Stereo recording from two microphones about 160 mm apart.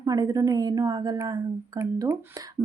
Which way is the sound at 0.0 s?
25° right (ahead or behind).